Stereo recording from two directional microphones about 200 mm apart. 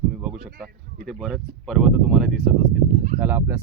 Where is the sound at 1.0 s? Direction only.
Centre (ahead or behind).